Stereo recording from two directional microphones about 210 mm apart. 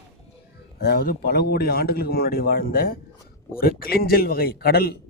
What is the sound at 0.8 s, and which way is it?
A man's voice, 45° left (ahead or behind).